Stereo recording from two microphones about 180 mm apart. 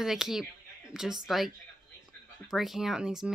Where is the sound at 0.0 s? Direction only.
Centre (ahead or behind).